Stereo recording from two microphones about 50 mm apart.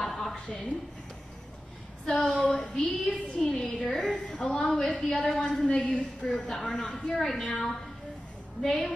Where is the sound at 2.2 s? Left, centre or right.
Left.